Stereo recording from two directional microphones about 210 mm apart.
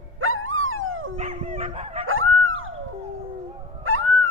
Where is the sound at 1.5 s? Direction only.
30° right (ahead or behind).